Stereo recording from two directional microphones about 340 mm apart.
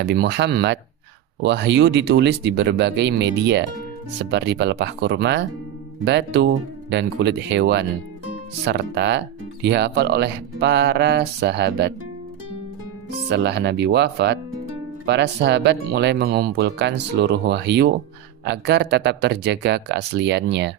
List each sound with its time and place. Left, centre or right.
0.0 s speech: right
13.3 s speech: right